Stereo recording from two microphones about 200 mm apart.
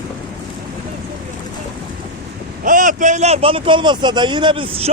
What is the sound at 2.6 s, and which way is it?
A man's voice, 40° right (ahead or behind).